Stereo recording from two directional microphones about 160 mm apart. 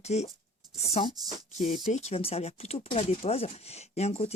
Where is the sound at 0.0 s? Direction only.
45° left (ahead or behind).